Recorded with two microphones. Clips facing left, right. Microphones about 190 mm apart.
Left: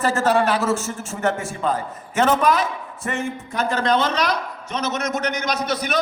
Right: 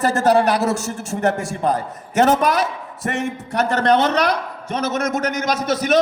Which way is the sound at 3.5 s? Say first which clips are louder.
Right 4 dB; 65° right (ahead or behind).